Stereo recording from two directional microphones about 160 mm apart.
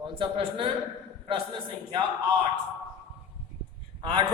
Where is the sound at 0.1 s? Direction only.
30° right (ahead or behind).